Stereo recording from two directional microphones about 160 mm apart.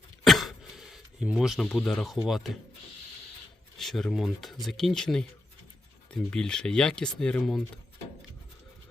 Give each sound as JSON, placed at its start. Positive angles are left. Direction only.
{"t": 0.3, "sound": "a sound", "side_deg": 0}
{"t": 2.2, "sound": "speech", "side_deg": 0}
{"t": 3.8, "sound": "speech", "side_deg": 0}